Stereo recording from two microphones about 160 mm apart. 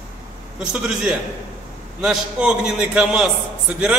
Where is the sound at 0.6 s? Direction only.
5° right (ahead or behind).